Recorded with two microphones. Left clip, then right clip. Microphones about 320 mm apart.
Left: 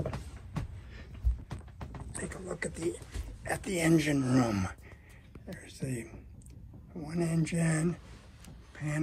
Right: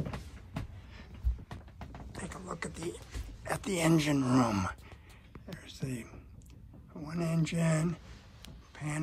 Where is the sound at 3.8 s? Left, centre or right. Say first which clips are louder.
Left 1 dB; centre.